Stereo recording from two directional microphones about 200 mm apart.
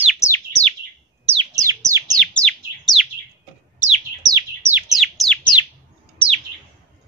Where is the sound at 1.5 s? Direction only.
15° right (ahead or behind).